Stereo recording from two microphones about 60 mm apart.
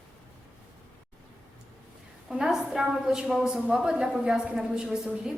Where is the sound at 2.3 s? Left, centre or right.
Centre.